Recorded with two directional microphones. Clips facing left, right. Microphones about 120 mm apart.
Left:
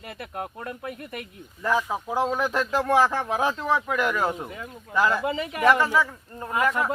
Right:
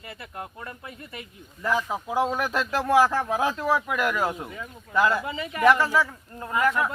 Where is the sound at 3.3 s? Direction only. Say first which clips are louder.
Left 1 dB; 10° right (ahead or behind).